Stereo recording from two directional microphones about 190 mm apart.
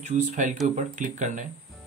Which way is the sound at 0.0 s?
40° right (ahead or behind).